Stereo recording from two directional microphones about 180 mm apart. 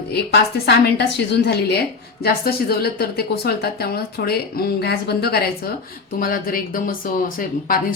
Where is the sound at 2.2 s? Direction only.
60° left (ahead or behind).